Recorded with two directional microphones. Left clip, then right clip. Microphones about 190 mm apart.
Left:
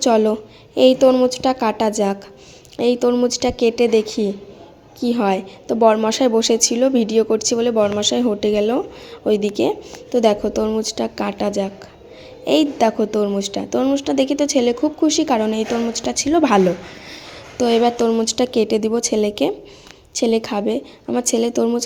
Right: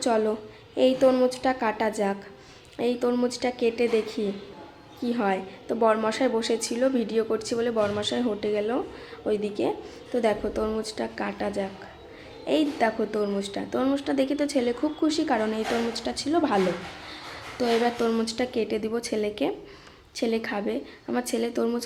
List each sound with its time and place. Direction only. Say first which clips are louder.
0.0 s a woman's voice: left 9 dB; 25° left (ahead or behind)
17.6 s a woman's voice: left 8 dB; 20° left (ahead or behind)